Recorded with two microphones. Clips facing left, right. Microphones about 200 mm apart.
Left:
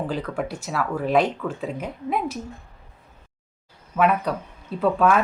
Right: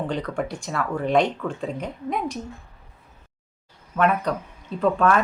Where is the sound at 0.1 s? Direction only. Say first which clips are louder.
Even; 5° left (ahead or behind).